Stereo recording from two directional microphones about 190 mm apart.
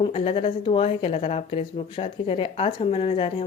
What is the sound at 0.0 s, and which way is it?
A woman's voice, 30° left (ahead or behind).